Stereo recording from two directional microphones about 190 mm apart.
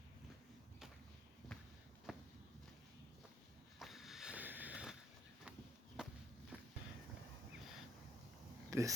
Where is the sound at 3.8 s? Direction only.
Centre (ahead or behind).